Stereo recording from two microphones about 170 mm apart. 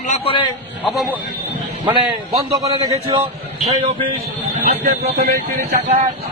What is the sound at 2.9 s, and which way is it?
Speech, 35° right (ahead or behind).